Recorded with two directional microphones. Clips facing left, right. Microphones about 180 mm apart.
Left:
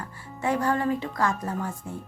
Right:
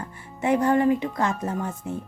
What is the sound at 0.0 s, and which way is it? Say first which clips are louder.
A woman's voice: right 2 dB; 20° right (ahead or behind).